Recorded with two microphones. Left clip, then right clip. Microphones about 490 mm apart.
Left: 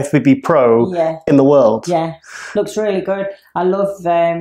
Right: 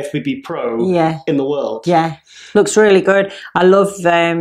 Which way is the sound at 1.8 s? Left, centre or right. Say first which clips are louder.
Right 3 dB; right.